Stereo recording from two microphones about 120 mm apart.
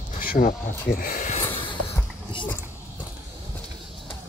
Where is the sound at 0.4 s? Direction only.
90° left.